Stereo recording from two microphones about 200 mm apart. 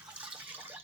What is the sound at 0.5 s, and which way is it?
Water, 10° right (ahead or behind).